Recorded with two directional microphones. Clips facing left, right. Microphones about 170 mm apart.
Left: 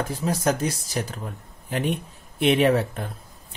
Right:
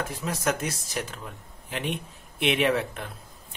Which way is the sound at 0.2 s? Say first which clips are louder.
Left 5 dB; 35° left (ahead or behind).